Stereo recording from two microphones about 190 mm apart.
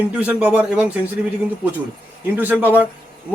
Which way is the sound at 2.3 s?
10° right (ahead or behind).